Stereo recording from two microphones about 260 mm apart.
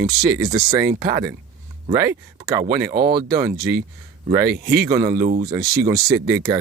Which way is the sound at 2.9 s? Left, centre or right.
Right.